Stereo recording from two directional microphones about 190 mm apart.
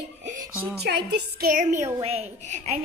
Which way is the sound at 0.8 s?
60° right (ahead or behind).